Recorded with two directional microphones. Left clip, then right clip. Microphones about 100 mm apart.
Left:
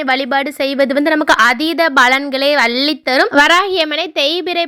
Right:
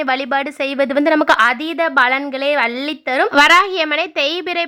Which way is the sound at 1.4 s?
30° left (ahead or behind).